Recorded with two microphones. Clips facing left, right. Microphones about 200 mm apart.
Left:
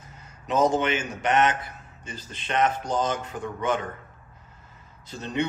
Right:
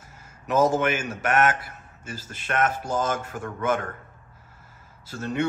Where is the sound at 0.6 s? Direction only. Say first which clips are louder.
Right 1 dB; 5° right (ahead or behind).